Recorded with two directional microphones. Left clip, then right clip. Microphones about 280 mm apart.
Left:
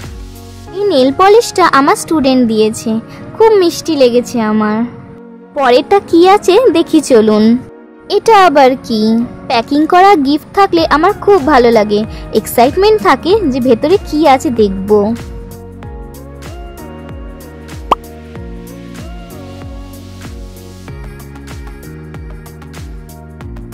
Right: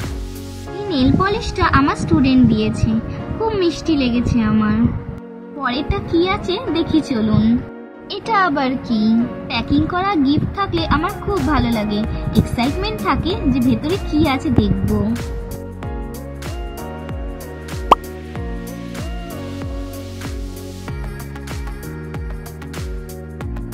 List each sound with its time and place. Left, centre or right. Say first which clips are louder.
0.8 s a child's voice: left 10 dB; left
17.9 s music: even; centre